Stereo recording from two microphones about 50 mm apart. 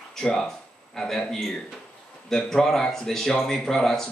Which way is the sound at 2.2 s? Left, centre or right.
Centre.